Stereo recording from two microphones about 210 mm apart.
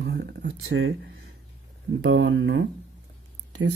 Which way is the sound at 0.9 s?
55° right (ahead or behind).